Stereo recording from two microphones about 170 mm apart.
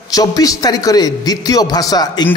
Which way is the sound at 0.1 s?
20° left (ahead or behind).